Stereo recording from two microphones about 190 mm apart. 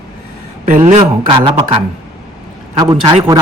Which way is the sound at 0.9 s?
30° right (ahead or behind).